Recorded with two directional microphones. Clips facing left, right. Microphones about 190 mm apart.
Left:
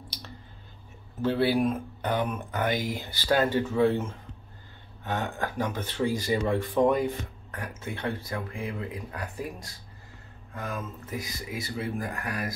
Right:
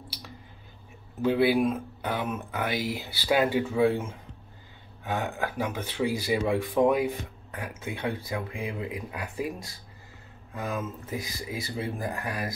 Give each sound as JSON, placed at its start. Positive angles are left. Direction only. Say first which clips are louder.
{"t": 1.2, "sound": "speech", "louder": "right 2 dB", "side_deg": -10}
{"t": 10.5, "sound": "speech", "louder": "right 3 dB", "side_deg": -10}
{"t": 11.7, "sound": "speech", "louder": "even", "side_deg": -25}